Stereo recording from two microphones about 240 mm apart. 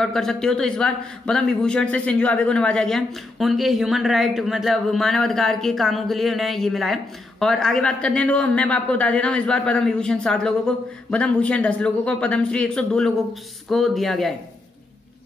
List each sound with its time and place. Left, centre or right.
0.0 s a man's voice: centre